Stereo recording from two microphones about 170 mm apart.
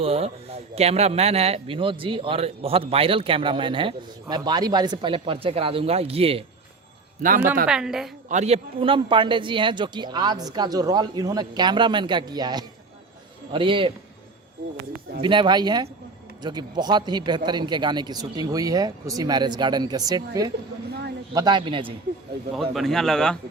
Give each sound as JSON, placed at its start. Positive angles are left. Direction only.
{"t": 0.0, "sound": "a man's voice", "side_deg": -35}
{"t": 7.2, "sound": "speech", "side_deg": -55}
{"t": 7.7, "sound": "a man's voice", "side_deg": -5}
{"t": 8.3, "sound": "a man's voice", "side_deg": -40}
{"t": 15.2, "sound": "speech", "side_deg": -30}
{"t": 22.7, "sound": "a man's voice", "side_deg": 0}